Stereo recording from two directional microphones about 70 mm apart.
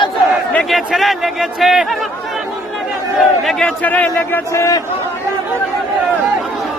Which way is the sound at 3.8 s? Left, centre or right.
Left.